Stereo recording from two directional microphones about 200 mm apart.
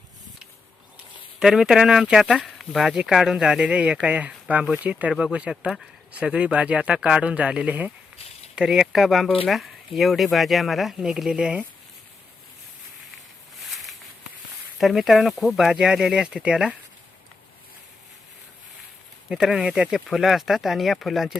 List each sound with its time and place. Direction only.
1.4 s speech: 5° right (ahead or behind)
13.7 s a sound: centre (ahead or behind)
14.8 s speech: centre (ahead or behind)
19.3 s speech: centre (ahead or behind)